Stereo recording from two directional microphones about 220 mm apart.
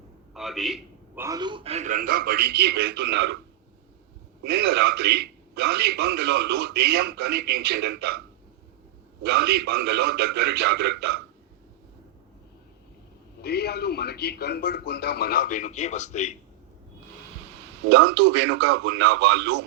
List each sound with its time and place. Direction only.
0.3 s a sound: centre (ahead or behind)
1.2 s a man's voice: 15° right (ahead or behind); by 3.3 s 50° right (ahead or behind)
4.4 s a man's voice: 45° right (ahead or behind)
9.3 s a man's voice: 45° right (ahead or behind)
13.4 s a man's voice: 45° left (ahead or behind)
17.8 s a man's voice: 50° right (ahead or behind)